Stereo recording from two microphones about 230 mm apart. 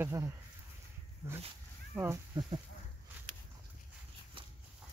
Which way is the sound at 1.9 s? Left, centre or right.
Centre.